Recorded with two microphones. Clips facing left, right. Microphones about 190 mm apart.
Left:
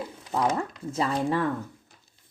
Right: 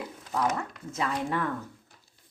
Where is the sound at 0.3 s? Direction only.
30° left (ahead or behind).